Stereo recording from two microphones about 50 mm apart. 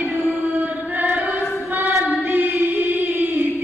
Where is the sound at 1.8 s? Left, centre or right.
Right.